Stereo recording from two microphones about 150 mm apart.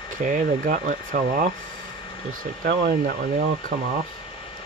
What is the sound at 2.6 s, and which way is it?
Speech, 85° right.